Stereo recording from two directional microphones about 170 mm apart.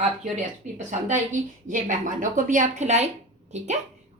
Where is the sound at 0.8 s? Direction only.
45° right (ahead or behind).